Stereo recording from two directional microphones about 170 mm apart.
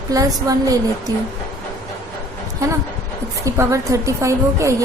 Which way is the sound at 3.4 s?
20° right (ahead or behind).